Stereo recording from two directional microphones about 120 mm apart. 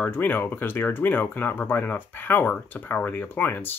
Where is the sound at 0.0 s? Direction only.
15° left (ahead or behind).